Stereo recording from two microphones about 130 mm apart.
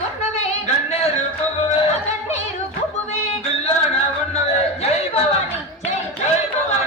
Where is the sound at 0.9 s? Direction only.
60° left (ahead or behind).